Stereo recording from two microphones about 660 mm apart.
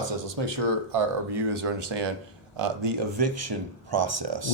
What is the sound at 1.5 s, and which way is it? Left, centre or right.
Speech, right.